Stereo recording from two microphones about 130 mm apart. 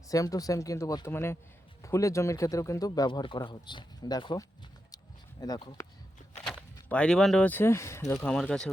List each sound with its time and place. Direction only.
0.1 s speech: 25° left (ahead or behind)
5.4 s speech: 30° left (ahead or behind)
6.4 s walk: centre (ahead or behind)
6.8 s speech: 10° left (ahead or behind)
8.3 s speech: 5° left (ahead or behind)